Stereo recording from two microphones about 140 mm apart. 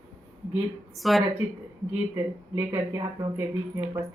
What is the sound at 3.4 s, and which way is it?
Speech, 20° right (ahead or behind).